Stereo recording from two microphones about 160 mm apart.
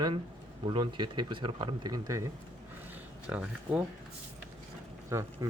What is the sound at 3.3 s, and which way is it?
Speech, 10° right (ahead or behind).